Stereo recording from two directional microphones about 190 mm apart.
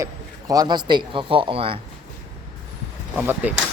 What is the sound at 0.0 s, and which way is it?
A man's voice, 20° right (ahead or behind).